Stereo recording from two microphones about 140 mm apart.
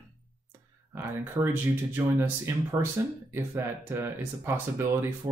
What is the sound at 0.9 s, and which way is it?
Speech, 15° right (ahead or behind).